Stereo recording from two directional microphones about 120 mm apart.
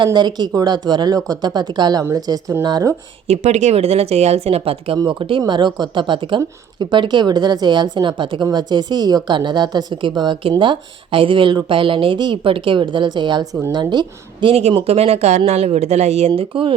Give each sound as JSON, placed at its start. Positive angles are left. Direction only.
{"t": 0.0, "sound": "a woman's voice", "side_deg": -35}
{"t": 3.2, "sound": "a woman's voice", "side_deg": -65}
{"t": 13.7, "sound": "a woman's voice", "side_deg": -40}
{"t": 14.7, "sound": "speech", "side_deg": -55}